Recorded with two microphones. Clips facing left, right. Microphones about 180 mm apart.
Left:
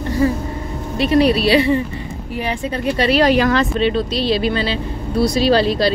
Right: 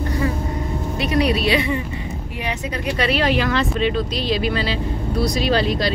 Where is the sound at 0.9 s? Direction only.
30° left (ahead or behind).